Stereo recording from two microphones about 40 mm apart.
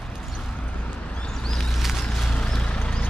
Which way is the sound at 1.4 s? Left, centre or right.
Centre.